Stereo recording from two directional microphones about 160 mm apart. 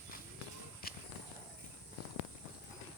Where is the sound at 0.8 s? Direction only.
70° left (ahead or behind).